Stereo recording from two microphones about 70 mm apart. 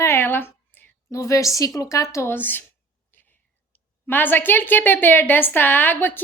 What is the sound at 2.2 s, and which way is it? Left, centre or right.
Speech, left.